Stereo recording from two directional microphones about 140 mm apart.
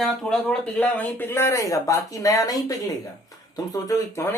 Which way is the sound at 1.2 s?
20° left (ahead or behind).